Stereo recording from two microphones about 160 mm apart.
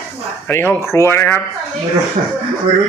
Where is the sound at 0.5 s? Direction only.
15° left (ahead or behind).